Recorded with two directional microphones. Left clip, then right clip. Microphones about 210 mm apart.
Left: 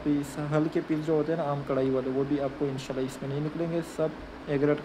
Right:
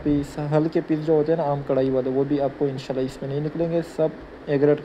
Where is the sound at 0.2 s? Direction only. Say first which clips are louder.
Right 6 dB; 10° right (ahead or behind).